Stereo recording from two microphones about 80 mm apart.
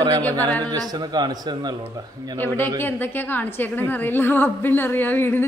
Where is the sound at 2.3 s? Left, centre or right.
Left.